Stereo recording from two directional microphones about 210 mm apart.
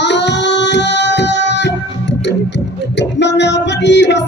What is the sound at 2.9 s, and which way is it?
Music, 55° left (ahead or behind).